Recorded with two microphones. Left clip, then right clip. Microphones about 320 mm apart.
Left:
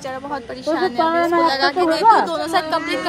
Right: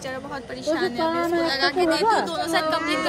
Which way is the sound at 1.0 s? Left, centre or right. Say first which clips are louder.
Left 8 dB; centre.